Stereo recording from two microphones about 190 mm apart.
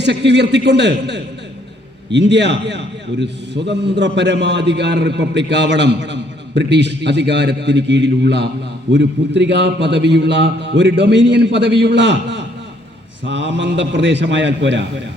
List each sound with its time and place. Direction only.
0.0 s a man's voice: 65° right (ahead or behind)